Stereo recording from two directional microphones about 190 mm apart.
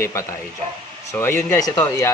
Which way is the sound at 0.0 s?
15° left (ahead or behind).